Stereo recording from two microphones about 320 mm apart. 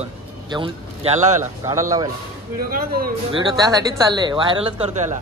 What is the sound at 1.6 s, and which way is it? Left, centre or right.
Speech, centre.